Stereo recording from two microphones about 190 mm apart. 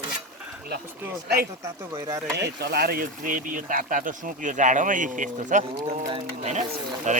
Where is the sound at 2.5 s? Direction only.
60° right (ahead or behind); by 5.6 s 40° right (ahead or behind).